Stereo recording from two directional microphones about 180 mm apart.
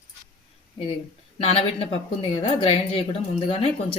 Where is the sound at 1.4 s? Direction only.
30° left (ahead or behind).